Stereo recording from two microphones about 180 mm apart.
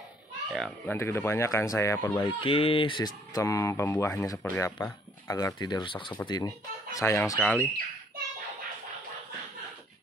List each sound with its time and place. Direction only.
0.5 s speech: centre (ahead or behind)
0.9 s speech: 15° left (ahead or behind)
2.4 s speech: 30° left (ahead or behind); by 7.7 s 10° left (ahead or behind)